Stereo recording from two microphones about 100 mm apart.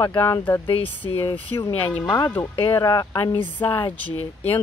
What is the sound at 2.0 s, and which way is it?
Speech, 45° left (ahead or behind).